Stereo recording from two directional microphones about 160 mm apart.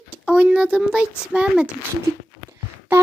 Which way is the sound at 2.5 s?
15° right (ahead or behind).